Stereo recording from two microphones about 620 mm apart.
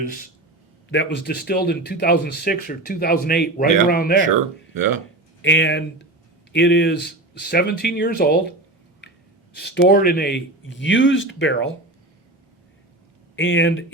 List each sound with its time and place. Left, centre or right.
0.9 s speech: centre
4.7 s speech: right
5.4 s speech: centre
13.3 s speech: centre